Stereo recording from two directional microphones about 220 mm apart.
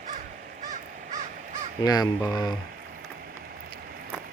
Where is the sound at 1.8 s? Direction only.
15° left (ahead or behind).